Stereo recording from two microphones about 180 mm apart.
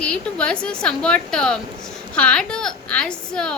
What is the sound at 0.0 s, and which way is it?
A woman's voice, 5° left (ahead or behind).